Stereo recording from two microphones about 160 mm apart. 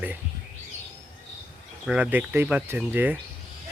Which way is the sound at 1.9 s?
10° right (ahead or behind).